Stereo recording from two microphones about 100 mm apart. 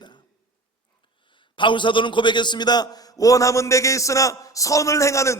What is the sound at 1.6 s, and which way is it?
A man's voice, 55° left (ahead or behind).